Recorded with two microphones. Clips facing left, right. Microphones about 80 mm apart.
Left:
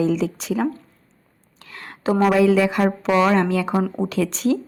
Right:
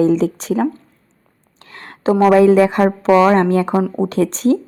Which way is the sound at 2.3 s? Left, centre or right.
Right.